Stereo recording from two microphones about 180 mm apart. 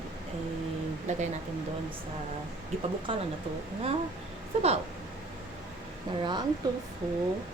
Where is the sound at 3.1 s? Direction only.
30° right (ahead or behind).